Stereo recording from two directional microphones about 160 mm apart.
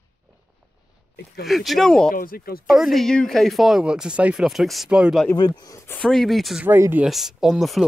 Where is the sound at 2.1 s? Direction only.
65° left (ahead or behind).